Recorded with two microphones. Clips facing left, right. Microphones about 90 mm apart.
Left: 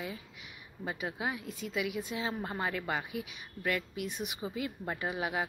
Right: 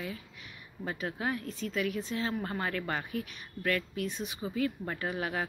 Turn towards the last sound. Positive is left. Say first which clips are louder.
# even
turn(degrees=15)  # may be behind; listen again after turning